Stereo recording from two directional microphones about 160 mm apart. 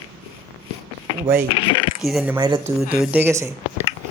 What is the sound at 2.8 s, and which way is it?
Speech, 5° right (ahead or behind).